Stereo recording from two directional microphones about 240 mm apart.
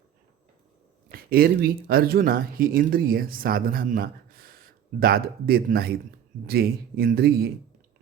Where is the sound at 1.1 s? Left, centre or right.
Right.